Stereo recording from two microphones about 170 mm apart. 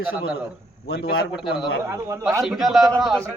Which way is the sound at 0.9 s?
65° left (ahead or behind).